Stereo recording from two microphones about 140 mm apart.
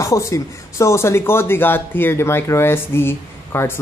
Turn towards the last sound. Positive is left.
turn(degrees=15)  # may be behind; listen again after turning